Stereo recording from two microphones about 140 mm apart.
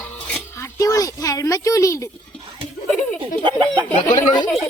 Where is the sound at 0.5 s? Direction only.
20° left (ahead or behind).